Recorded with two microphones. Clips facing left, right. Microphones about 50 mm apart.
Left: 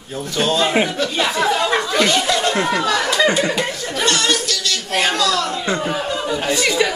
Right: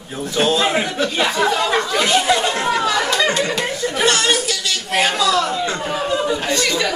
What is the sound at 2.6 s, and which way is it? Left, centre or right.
Chatter, centre.